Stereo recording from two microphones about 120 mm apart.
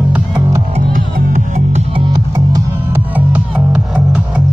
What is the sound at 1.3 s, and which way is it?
Music, 70° right (ahead or behind).